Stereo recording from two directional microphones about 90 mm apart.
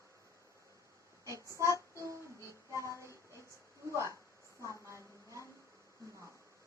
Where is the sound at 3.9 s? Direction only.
35° left (ahead or behind).